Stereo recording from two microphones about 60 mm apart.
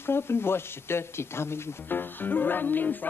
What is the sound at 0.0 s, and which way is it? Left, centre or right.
Speech, left.